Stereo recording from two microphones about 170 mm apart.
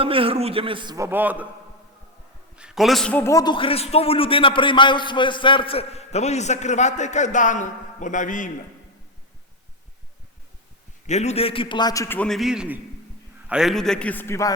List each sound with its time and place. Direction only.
0.0 s a man's voice: 30° right (ahead or behind)
0.9 s a man's voice: 15° right (ahead or behind)
2.6 s a man's voice: 5° right (ahead or behind); by 8.5 s 50° left (ahead or behind)
11.0 s a man's voice: 40° left (ahead or behind); by 12.0 s 25° left (ahead or behind)
12.0 s a man's voice: 10° left (ahead or behind)